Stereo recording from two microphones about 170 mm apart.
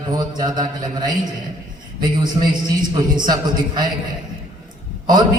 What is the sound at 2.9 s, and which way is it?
Speech, 25° right (ahead or behind).